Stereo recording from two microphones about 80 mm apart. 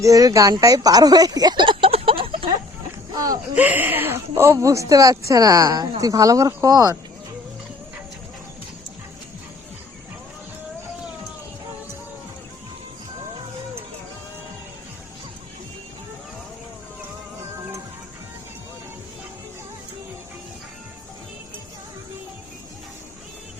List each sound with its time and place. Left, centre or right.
0.0 s a woman's voice: right
0.6 s a sound: right
3.5 s speech: centre
4.5 s a woman's voice: right